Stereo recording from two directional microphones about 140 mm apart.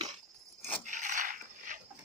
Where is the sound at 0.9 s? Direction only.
65° right (ahead or behind).